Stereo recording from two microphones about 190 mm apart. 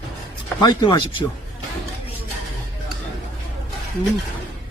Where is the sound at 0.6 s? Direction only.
20° left (ahead or behind).